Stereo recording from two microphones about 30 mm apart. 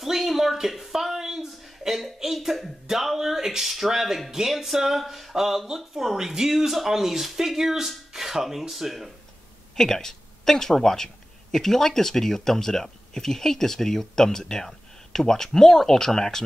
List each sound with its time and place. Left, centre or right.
0.0 s a sound: centre
2.4 s speech: centre
9.8 s speech: centre